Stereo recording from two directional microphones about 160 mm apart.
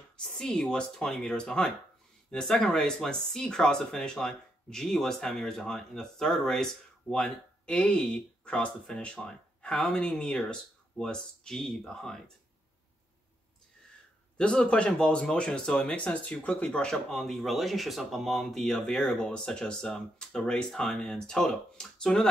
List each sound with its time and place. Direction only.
0.2 s speech: 5° left (ahead or behind)
14.3 s speech: 5° left (ahead or behind)